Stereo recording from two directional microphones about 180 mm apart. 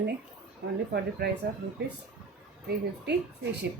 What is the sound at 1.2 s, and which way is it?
Speech, 60° right (ahead or behind).